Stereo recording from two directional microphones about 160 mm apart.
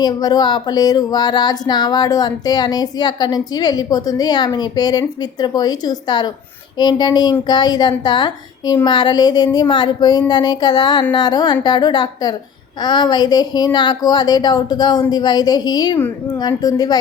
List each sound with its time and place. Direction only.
0.0 s speech: 25° left (ahead or behind)